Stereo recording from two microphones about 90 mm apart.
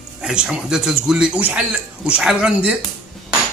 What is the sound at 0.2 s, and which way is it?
A man's voice, 10° right (ahead or behind).